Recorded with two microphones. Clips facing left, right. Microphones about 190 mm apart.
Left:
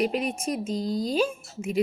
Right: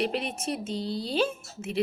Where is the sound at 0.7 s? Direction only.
40° left (ahead or behind).